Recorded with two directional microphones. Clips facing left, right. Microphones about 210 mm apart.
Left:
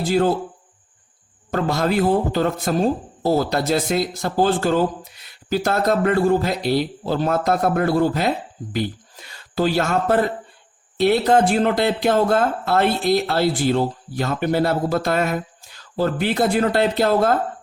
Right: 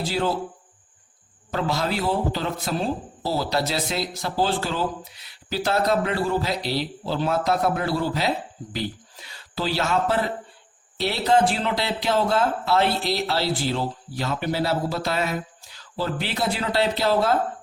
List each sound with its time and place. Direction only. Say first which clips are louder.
0.0 s speech: left 6 dB; 50° left (ahead or behind)
1.5 s speech: left 5 dB; 50° left (ahead or behind)